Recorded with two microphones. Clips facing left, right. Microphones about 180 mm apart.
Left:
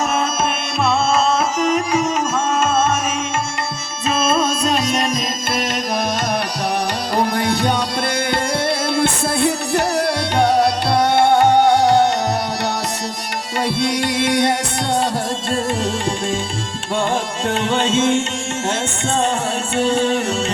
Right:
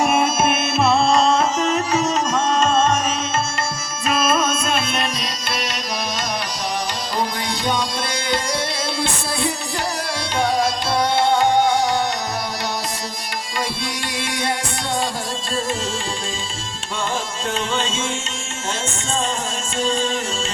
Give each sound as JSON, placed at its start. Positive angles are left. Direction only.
{"t": 0.0, "sound": "music", "side_deg": -10}
{"t": 1.5, "sound": "music", "side_deg": 10}
{"t": 4.1, "sound": "music", "side_deg": 25}
{"t": 7.2, "sound": "music", "side_deg": 60}
{"t": 9.0, "sound": "music", "side_deg": 60}
{"t": 13.8, "sound": "music", "side_deg": 65}
{"t": 17.5, "sound": "music", "side_deg": 60}
{"t": 19.7, "sound": "music", "side_deg": 65}